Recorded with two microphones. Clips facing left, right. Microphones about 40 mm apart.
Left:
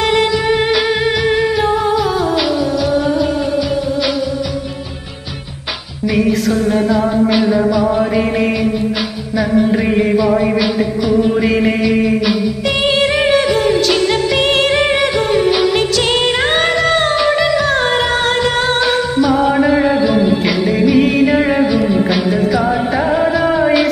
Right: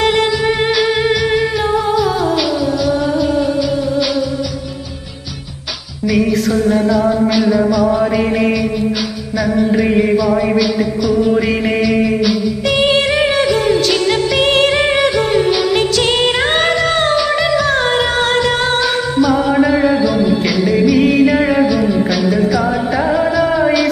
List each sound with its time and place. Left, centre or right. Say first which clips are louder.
0.0 s music: even; centre
6.1 s music: even; centre
9.7 s music: right 1 dB; centre
10.6 s music: even; centre
11.3 s music: left 1 dB; centre